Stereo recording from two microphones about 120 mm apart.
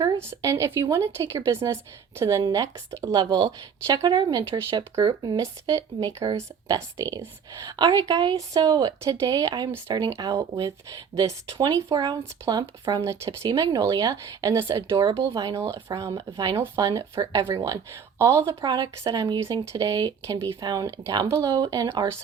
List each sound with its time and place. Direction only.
0.2 s a woman's voice: 25° right (ahead or behind)
18.6 s a woman's voice: 35° right (ahead or behind)